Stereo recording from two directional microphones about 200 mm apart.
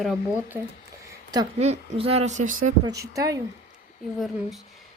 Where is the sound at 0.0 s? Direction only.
Centre (ahead or behind).